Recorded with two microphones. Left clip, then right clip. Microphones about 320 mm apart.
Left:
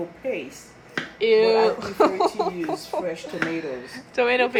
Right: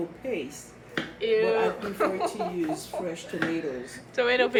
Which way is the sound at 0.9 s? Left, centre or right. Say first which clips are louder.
Left 6 dB; centre.